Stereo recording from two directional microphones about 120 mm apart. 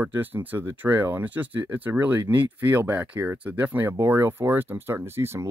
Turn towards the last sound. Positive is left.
turn(degrees=-20)  # may be behind; listen again after turning